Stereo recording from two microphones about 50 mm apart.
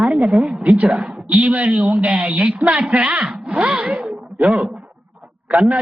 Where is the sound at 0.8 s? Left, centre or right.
Right.